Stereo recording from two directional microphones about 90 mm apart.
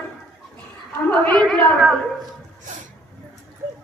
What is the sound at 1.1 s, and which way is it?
Speech, 15° left (ahead or behind).